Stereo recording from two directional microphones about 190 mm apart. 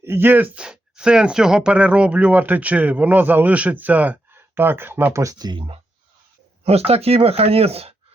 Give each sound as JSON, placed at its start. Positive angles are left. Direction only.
{"t": 0.0, "sound": "speech", "side_deg": -10}